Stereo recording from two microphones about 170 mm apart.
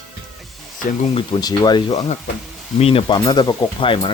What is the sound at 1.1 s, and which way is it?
Speech, 25° left (ahead or behind).